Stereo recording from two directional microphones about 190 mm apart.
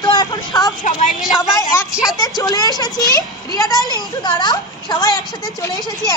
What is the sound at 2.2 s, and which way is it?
A woman's voice, 20° left (ahead or behind).